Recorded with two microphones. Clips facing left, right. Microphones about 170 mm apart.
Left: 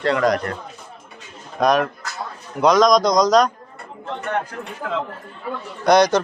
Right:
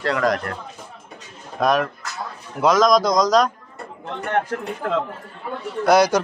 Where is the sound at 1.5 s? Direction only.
Centre (ahead or behind).